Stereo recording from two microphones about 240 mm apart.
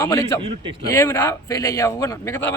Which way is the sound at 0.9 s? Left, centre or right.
Centre.